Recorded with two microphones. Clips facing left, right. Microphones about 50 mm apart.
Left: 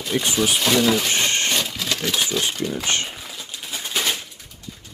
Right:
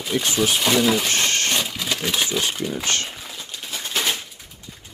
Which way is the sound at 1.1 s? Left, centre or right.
Centre.